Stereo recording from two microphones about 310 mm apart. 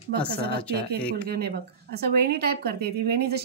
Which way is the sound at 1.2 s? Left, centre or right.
Right.